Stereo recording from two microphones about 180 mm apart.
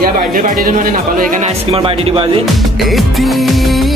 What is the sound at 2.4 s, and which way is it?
Music, centre (ahead or behind).